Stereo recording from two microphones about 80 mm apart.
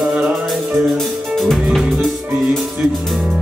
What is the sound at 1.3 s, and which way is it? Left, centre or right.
Music, centre.